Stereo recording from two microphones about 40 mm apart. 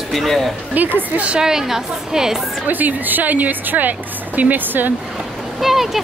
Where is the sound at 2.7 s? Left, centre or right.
Right.